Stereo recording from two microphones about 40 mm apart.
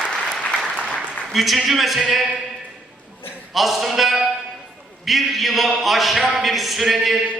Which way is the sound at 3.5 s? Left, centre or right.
Centre.